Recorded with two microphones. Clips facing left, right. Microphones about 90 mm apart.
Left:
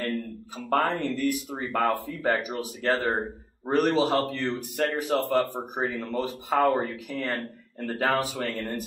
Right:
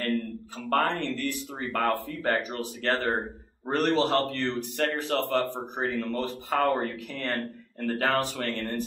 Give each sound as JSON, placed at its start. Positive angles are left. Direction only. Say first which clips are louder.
{"t": 0.8, "sound": "a man's voice", "louder": "left 3 dB", "side_deg": 15}